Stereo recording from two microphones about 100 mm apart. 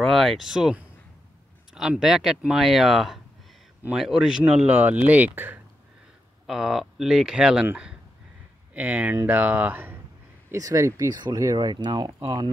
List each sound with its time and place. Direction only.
0.0 s speech: centre (ahead or behind); by 5.6 s 20° right (ahead or behind)
6.4 s speech: 5° right (ahead or behind)
8.7 s speech: 15° right (ahead or behind)
10.5 s speech: 35° right (ahead or behind)